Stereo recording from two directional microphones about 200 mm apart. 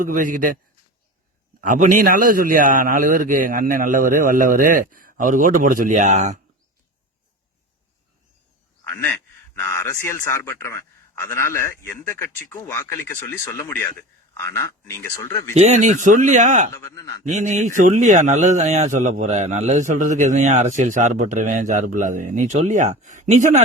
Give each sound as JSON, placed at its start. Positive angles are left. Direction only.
{"t": 0.0, "sound": "speech", "side_deg": -40}
{"t": 1.6, "sound": "a man's voice", "side_deg": -40}
{"t": 9.6, "sound": "a man's voice", "side_deg": 15}
{"t": 15.5, "sound": "speech", "side_deg": -35}
{"t": 16.7, "sound": "a man's voice", "side_deg": 15}
{"t": 17.2, "sound": "speech", "side_deg": -35}